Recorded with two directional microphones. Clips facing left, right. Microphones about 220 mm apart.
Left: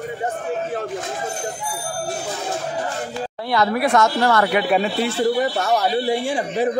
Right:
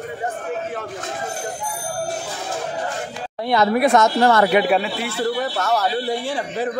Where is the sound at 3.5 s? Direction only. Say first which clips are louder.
Right 3 dB; 20° right (ahead or behind).